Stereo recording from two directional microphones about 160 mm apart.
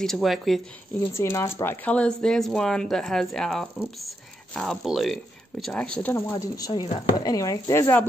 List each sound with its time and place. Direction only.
0.0 s speech: centre (ahead or behind)
1.1 s speech: 20° left (ahead or behind)
6.3 s speech: 25° left (ahead or behind)